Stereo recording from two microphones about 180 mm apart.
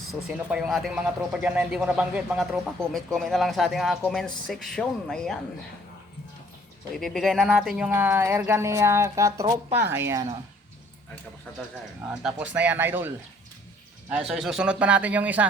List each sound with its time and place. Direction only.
0.1 s speech: 5° right (ahead or behind)
6.9 s speech: centre (ahead or behind); by 10.2 s 15° right (ahead or behind)
12.0 s speech: 5° right (ahead or behind)